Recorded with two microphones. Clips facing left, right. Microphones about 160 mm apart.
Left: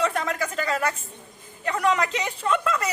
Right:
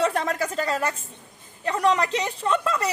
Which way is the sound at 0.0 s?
35° right (ahead or behind).